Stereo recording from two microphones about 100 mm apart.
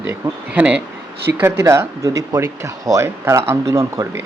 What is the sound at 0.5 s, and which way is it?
Speech, 15° right (ahead or behind).